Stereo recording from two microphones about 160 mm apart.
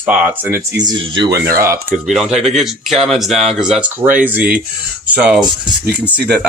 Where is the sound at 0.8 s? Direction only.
30° right (ahead or behind).